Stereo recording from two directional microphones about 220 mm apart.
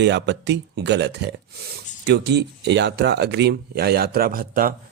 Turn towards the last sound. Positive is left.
turn(degrees=-40)  # may be behind; listen again after turning